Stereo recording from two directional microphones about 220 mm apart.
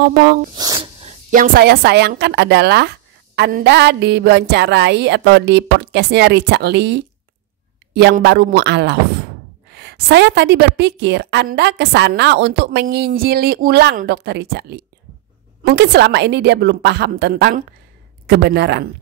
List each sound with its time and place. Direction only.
0.0 s a woman's voice: 50° right (ahead or behind)
0.6 s a sound: 15° right (ahead or behind)
1.0 s a woman's voice: 40° right (ahead or behind)